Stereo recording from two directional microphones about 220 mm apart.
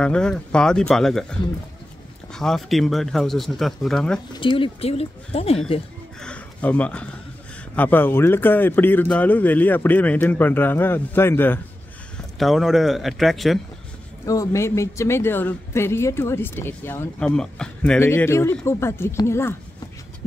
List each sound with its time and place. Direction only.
0.0 s speech: 5° left (ahead or behind)
4.3 s speech: 25° left (ahead or behind)
6.2 s speech: 5° left (ahead or behind)
14.2 s speech: 15° left (ahead or behind)